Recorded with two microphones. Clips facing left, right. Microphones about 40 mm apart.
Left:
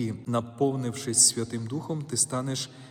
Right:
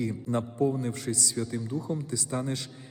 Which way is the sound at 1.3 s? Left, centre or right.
Left.